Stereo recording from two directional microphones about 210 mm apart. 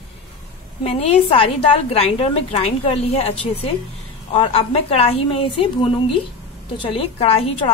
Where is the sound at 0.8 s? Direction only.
30° left (ahead or behind).